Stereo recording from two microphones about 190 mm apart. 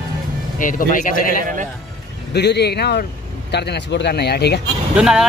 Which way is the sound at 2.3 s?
60° left (ahead or behind).